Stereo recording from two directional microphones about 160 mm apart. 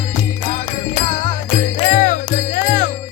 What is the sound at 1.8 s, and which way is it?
Music, 50° left (ahead or behind).